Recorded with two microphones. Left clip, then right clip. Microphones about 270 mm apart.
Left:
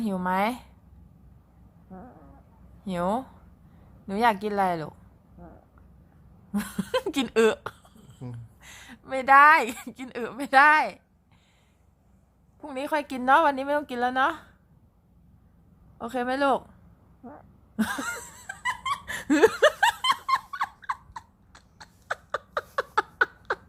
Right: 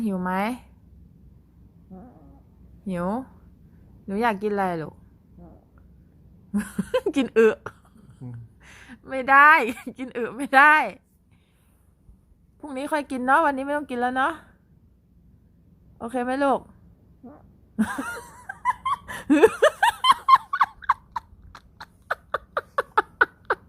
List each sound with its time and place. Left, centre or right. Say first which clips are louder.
0.0 s a woman's voice: left 1 dB; centre
1.9 s a sound: left 1 dB; centre
2.8 s a woman's voice: left 1 dB; centre
6.5 s a woman's voice: right 3 dB; centre
12.5 s a woman's voice: right 1 dB; centre
16.0 s a woman's voice: right 1 dB; centre
17.7 s laughter: right 1 dB; centre